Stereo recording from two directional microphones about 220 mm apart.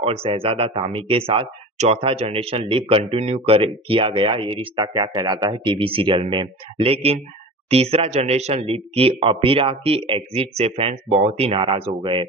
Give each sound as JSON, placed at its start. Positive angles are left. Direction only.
{"t": 0.0, "sound": "speech", "side_deg": -25}